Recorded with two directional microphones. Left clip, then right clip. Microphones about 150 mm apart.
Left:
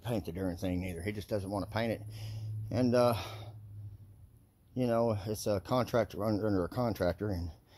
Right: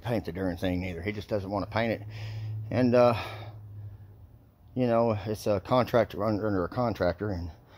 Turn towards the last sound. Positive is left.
turn(degrees=15)  # may be behind; listen again after turning